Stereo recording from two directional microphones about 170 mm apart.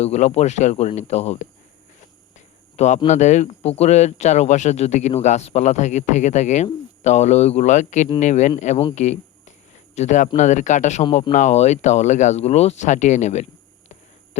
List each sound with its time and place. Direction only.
0.0 s speech: 40° left (ahead or behind)
2.7 s speech: 45° left (ahead or behind)